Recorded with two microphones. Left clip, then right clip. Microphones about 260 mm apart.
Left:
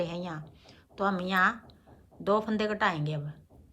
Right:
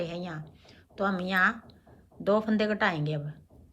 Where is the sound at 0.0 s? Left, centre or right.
Centre.